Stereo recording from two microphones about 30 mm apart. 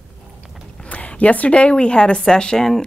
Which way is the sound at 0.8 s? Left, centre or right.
Left.